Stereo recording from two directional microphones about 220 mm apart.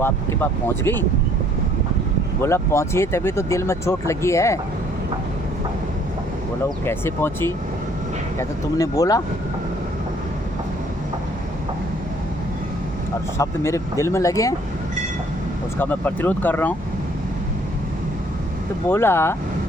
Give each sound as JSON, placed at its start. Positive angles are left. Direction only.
{"t": 0.0, "sound": "speech", "side_deg": 10}
{"t": 2.4, "sound": "speech", "side_deg": 10}
{"t": 6.8, "sound": "speech", "side_deg": 10}
{"t": 13.4, "sound": "speech", "side_deg": 15}
{"t": 15.8, "sound": "speech", "side_deg": 10}
{"t": 18.9, "sound": "speech", "side_deg": 10}